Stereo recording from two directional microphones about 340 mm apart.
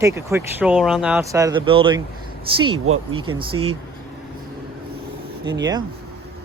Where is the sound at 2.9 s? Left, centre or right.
Right.